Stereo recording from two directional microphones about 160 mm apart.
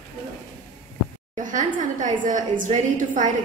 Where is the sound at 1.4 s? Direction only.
55° right (ahead or behind).